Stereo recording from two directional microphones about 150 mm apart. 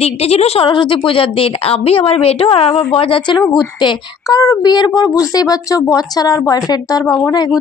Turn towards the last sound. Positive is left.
turn(degrees=25)  # may be behind; listen again after turning